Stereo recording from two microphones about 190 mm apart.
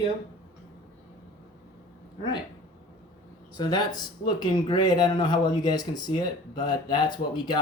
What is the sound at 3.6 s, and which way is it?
Speech, 20° left (ahead or behind).